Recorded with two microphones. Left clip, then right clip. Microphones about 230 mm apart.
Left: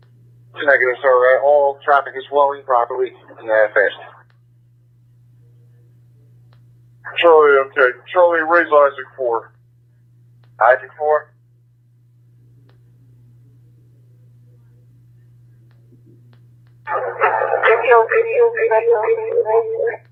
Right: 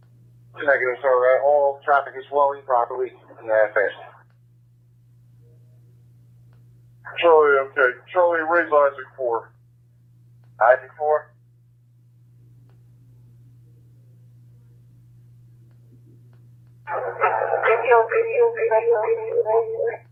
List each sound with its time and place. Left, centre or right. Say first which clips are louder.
0.5 s a man's voice: left 6 dB; left
7.0 s speech: left 5 dB; left
10.6 s a man's voice: left 3 dB; left
16.8 s music: left 5 dB; left
17.8 s a sound: left 3 dB; left
18.3 s a man's voice: left 3 dB; left